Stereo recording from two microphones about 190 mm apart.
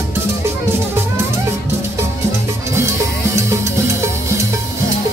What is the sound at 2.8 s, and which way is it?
Music, 15° right (ahead or behind).